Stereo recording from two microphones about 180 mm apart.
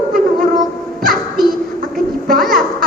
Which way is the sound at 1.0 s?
55° right (ahead or behind).